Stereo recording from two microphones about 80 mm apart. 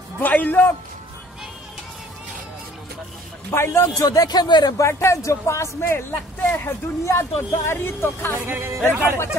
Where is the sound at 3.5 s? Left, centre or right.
Left.